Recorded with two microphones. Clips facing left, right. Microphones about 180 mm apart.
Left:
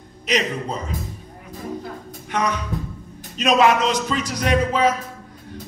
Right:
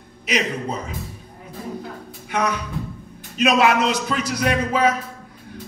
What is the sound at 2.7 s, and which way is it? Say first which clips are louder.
Music: left 1 dB; 40° left (ahead or behind).